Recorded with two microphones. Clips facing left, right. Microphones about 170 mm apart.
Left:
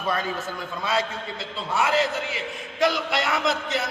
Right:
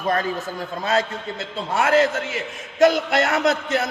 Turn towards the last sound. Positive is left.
turn(degrees=-50)  # may be behind; listen again after turning